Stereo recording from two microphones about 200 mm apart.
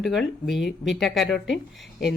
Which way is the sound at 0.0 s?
Centre (ahead or behind).